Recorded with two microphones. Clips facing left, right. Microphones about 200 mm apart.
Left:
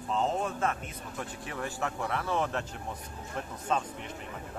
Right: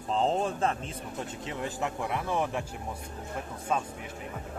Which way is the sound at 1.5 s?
20° right (ahead or behind).